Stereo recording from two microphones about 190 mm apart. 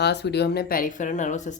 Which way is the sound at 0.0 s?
60° left (ahead or behind).